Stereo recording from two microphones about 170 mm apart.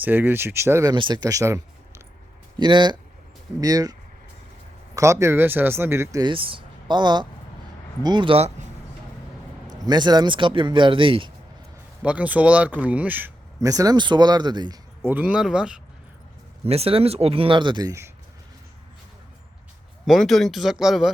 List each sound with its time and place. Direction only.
0.0 s speech: 10° right (ahead or behind)
4.9 s speech: 15° right (ahead or behind); by 8.6 s 40° right (ahead or behind)
9.7 s speech: 25° right (ahead or behind)
12.0 s speech: 10° right (ahead or behind); by 14.8 s 25° right (ahead or behind)
15.0 s speech: 10° right (ahead or behind)
16.6 s speech: 35° right (ahead or behind); by 18.1 s 20° right (ahead or behind)
20.1 s speech: centre (ahead or behind)